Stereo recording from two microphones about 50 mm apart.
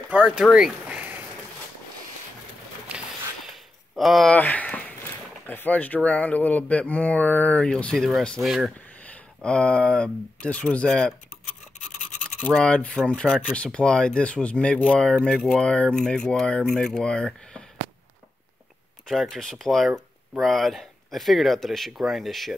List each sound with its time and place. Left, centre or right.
0.4 s speech: centre
0.8 s a sound: right
3.9 s speech: centre
4.4 s a sound: left
5.5 s speech: left
7.6 s speech: centre
8.4 s speech: centre
9.4 s speech: left
12.5 s speech: left
15.3 s speech: centre
15.6 s speech: left
19.0 s speech: centre